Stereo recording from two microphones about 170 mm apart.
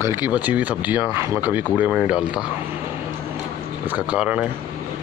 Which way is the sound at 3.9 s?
5° right (ahead or behind).